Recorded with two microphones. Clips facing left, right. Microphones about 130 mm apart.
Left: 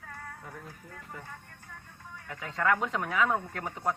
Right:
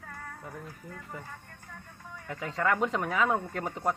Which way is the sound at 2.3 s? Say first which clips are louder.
Even; centre (ahead or behind).